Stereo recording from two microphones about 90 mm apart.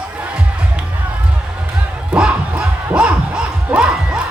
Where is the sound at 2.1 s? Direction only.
10° right (ahead or behind).